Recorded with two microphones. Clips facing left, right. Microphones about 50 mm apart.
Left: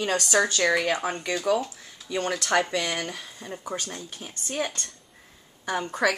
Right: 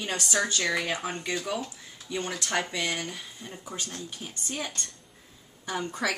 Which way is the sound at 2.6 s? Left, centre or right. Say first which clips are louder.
Left 1 dB; left.